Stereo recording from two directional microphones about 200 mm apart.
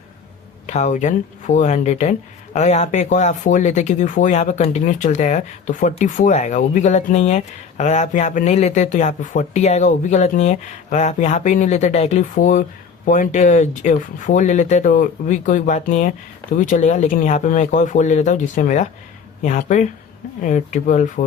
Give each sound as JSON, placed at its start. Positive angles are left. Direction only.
{"t": 0.7, "sound": "speech", "side_deg": 35}